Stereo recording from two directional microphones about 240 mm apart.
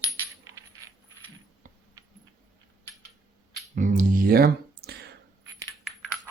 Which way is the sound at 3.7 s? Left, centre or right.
Right.